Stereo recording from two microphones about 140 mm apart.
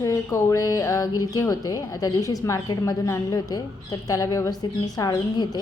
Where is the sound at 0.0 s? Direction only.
20° left (ahead or behind).